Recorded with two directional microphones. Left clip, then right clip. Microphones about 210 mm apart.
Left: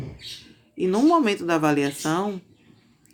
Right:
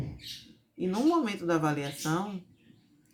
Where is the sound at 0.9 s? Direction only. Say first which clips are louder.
Left 9 dB; 45° left (ahead or behind).